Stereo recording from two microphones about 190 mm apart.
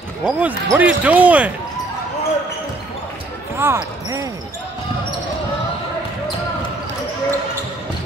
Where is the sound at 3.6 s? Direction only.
15° right (ahead or behind).